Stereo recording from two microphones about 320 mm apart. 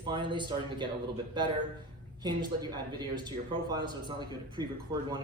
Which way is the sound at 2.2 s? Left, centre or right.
Centre.